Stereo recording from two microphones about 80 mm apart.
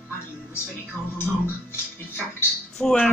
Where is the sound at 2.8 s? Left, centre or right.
Centre.